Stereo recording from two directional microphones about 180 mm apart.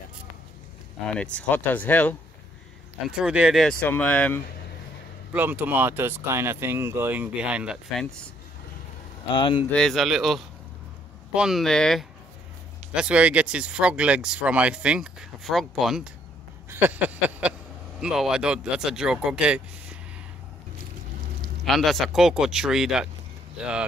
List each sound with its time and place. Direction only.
1.1 s speech: 5° left (ahead or behind)
3.1 s speech: 5° right (ahead or behind)
5.3 s speech: 10° right (ahead or behind)
9.3 s speech: 25° left (ahead or behind)
9.7 s speech: 5° left (ahead or behind)
16.7 s a sound: 10° right (ahead or behind)
18.0 s speech: 5° right (ahead or behind)
21.6 s speech: centre (ahead or behind)